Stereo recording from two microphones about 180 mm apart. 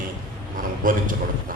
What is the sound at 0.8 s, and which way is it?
Speech, 50° right (ahead or behind).